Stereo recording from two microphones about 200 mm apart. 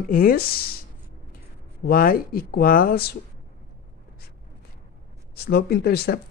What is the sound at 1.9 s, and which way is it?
Speech, 45° left (ahead or behind).